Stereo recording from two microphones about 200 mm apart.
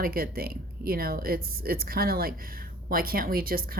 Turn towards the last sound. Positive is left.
turn(degrees=-45)  # may be behind; listen again after turning